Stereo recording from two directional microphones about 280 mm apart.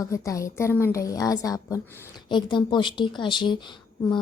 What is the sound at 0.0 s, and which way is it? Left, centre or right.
Speech, centre.